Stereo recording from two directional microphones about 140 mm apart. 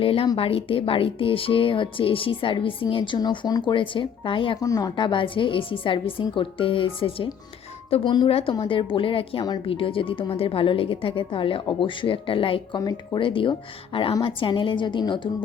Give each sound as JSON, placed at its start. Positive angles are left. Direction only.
{"t": 0.0, "sound": "a woman's voice", "side_deg": 40}
{"t": 4.6, "sound": "a woman's voice", "side_deg": 25}